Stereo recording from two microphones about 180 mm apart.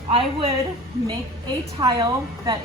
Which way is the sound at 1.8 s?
25° right (ahead or behind).